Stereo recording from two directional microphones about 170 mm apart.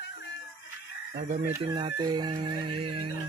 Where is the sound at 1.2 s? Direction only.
45° right (ahead or behind).